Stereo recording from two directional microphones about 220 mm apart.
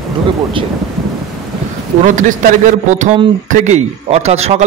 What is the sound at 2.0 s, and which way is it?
A man's voice, 35° right (ahead or behind).